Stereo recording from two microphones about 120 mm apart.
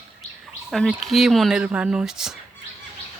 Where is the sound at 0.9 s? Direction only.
Centre (ahead or behind).